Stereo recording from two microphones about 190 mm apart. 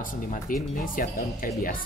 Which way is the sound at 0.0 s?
45° left (ahead or behind).